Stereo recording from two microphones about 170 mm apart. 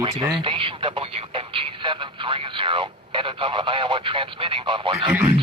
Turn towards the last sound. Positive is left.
turn(degrees=-10)  # may be behind; listen again after turning